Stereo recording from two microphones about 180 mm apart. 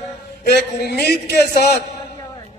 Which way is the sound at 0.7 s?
65° left (ahead or behind).